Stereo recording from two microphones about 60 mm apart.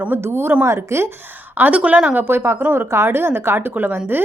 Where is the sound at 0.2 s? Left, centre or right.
Right.